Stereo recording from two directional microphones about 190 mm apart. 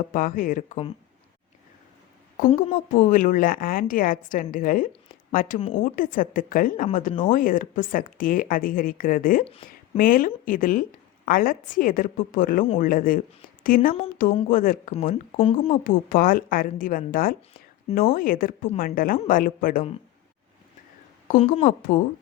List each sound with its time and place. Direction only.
0.1 s a woman's voice: 45° left (ahead or behind)
2.6 s a woman's voice: 45° left (ahead or behind)
9.4 s speech: 30° left (ahead or behind)
10.0 s a woman's voice: 50° left (ahead or behind)
15.1 s speech: 30° left (ahead or behind)
15.8 s a woman's voice: 45° left (ahead or behind)
21.3 s speech: 30° left (ahead or behind)
21.6 s a woman's voice: 45° left (ahead or behind)